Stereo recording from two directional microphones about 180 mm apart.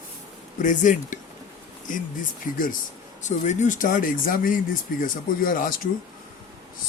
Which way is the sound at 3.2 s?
40° left (ahead or behind).